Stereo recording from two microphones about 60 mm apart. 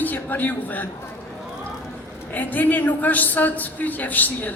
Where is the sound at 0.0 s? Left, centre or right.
Left.